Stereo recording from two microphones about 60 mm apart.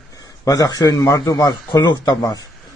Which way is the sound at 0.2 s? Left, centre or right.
Left.